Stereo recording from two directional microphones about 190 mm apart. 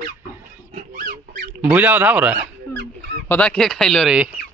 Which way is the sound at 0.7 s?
45° right (ahead or behind).